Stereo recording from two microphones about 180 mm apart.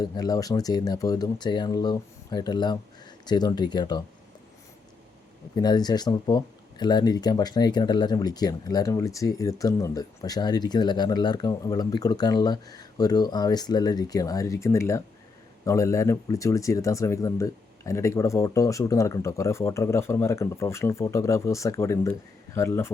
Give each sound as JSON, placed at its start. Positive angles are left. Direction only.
{"t": 0.0, "sound": "speech", "side_deg": 20}
{"t": 5.5, "sound": "speech", "side_deg": 20}